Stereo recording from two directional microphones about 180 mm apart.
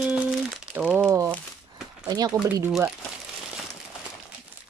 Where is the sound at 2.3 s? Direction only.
15° right (ahead or behind).